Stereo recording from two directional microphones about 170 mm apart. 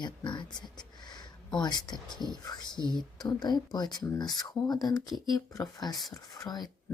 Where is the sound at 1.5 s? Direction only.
25° left (ahead or behind).